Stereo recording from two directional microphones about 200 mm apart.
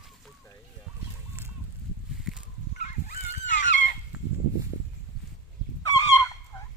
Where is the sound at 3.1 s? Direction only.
40° left (ahead or behind).